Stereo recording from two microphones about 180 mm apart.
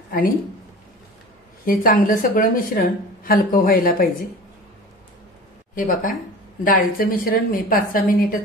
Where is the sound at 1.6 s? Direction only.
50° left (ahead or behind).